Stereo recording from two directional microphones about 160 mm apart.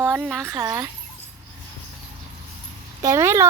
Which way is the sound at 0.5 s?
20° right (ahead or behind).